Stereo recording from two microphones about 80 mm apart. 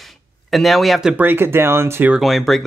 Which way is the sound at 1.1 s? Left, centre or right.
Right.